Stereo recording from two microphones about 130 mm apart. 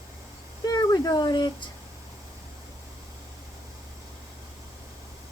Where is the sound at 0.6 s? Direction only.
30° left (ahead or behind).